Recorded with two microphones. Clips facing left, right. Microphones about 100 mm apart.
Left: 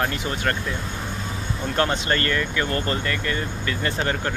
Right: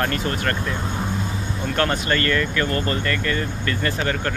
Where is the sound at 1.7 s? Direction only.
20° left (ahead or behind).